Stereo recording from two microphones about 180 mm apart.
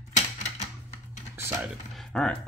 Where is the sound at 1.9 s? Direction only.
Centre (ahead or behind).